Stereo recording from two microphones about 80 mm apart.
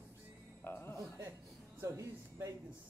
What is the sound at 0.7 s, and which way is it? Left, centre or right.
Music, left.